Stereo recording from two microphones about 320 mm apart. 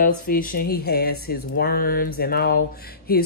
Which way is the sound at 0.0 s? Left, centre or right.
Left.